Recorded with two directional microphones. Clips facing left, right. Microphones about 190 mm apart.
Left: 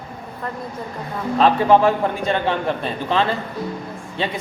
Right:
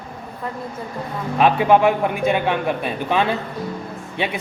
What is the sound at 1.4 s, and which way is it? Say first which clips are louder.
A man's voice: even; 10° right (ahead or behind).